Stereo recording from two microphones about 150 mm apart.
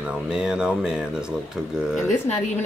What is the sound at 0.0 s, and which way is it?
Speech, 5° right (ahead or behind).